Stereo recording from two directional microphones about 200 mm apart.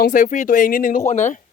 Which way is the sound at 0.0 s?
40° left (ahead or behind).